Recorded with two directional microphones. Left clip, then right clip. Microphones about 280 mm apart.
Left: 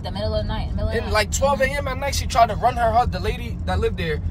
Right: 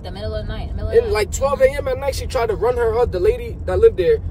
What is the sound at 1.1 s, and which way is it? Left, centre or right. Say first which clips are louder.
Speech: right 1 dB; centre.